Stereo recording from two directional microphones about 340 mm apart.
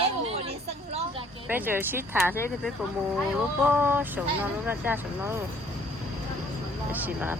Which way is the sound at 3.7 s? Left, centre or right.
Centre.